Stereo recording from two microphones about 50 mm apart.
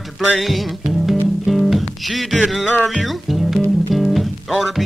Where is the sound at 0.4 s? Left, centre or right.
Centre.